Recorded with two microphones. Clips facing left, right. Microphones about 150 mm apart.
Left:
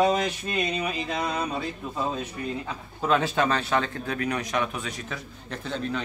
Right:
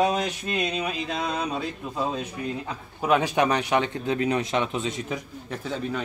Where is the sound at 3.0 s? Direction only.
15° right (ahead or behind).